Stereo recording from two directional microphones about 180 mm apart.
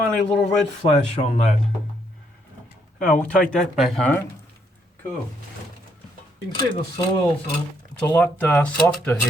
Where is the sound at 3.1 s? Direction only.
10° left (ahead or behind).